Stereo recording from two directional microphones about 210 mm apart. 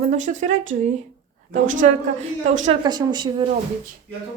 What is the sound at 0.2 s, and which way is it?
Speech, 35° right (ahead or behind).